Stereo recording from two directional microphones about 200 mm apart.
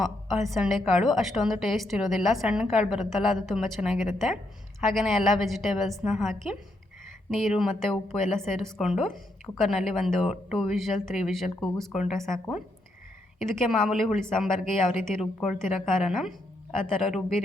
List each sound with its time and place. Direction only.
0.0 s a woman's voice: centre (ahead or behind)
13.4 s a woman's voice: 5° left (ahead or behind)